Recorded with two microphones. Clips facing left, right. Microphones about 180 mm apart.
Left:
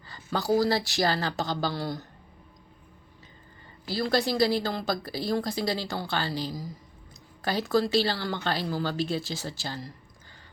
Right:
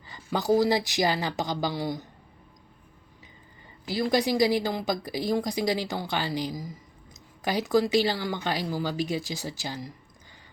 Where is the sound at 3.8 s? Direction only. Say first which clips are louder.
Right 2 dB; 15° right (ahead or behind).